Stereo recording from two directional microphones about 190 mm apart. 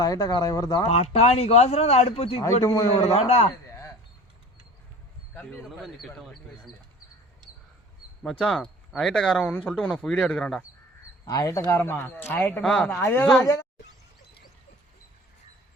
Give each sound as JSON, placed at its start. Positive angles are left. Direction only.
{"t": 0.0, "sound": "speech", "side_deg": 20}
{"t": 0.9, "sound": "speech", "side_deg": 30}
{"t": 2.4, "sound": "speech", "side_deg": 15}
{"t": 3.0, "sound": "speech", "side_deg": 35}
{"t": 3.7, "sound": "a sound", "side_deg": 15}
{"t": 5.3, "sound": "speech", "side_deg": 10}
{"t": 8.2, "sound": "speech", "side_deg": 0}
{"t": 11.3, "sound": "speech", "side_deg": 20}